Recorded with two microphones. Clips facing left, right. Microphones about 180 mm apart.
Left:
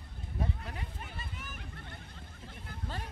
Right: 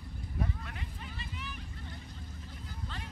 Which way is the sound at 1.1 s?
50° left (ahead or behind).